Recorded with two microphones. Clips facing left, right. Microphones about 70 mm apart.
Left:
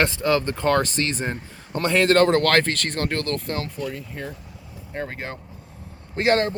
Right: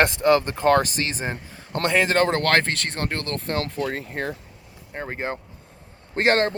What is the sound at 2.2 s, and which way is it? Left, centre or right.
Speech, right.